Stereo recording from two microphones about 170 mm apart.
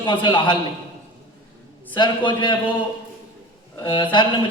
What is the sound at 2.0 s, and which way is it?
Speech, 25° left (ahead or behind).